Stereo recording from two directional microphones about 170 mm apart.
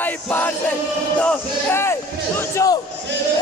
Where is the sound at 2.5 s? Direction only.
20° left (ahead or behind).